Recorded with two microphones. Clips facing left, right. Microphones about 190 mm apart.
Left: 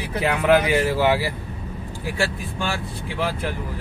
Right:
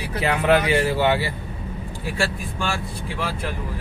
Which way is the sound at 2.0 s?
15° left (ahead or behind).